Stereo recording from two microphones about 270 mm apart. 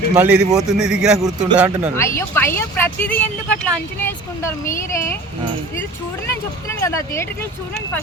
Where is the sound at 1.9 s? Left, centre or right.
Centre.